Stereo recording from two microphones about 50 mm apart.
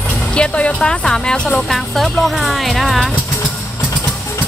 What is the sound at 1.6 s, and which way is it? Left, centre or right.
Speech, centre.